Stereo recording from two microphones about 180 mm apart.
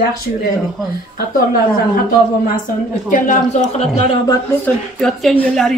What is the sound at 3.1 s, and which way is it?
A man's voice, 45° left (ahead or behind).